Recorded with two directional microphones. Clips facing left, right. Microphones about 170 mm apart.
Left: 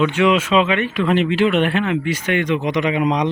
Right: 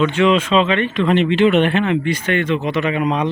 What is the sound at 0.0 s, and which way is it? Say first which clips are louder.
Speech: right 1 dB; 10° left (ahead or behind).